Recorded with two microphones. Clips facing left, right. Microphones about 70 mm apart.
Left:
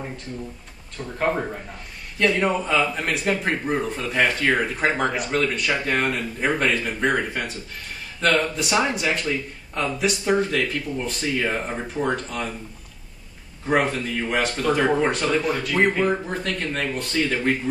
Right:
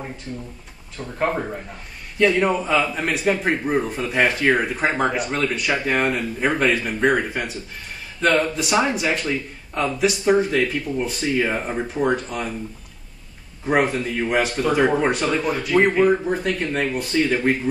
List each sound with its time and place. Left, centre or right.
0.9 s a man's voice: centre
13.7 s speech: centre